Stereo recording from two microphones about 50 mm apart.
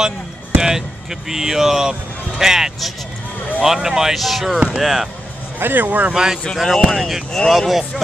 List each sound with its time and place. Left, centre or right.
0.6 s speech: centre
5.6 s speech: right
6.1 s speech: centre
6.5 s speech: centre